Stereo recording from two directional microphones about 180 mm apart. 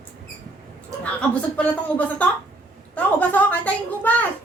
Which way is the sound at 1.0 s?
5° left (ahead or behind).